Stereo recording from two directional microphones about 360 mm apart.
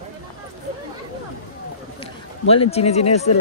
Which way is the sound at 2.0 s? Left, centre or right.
Centre.